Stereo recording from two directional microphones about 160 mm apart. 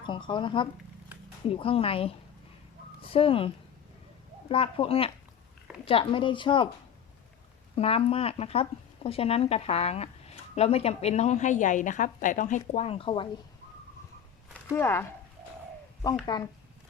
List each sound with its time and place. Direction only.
0.0 s speech: 30° left (ahead or behind)
7.8 s a woman's voice: 40° left (ahead or behind)
14.7 s speech: 15° left (ahead or behind)
16.2 s speech: 25° left (ahead or behind)